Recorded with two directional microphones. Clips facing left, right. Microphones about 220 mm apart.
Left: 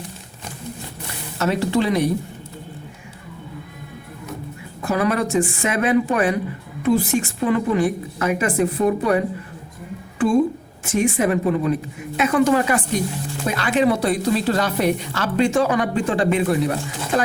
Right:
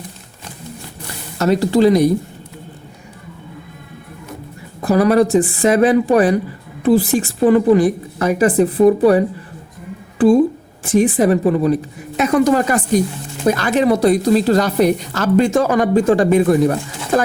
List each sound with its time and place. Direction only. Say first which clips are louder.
1.4 s a woman's voice: right 6 dB; 40° right (ahead or behind)
4.8 s a woman's voice: right 8 dB; 35° right (ahead or behind)